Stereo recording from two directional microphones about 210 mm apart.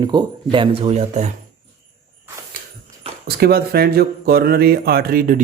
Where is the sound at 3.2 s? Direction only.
50° right (ahead or behind).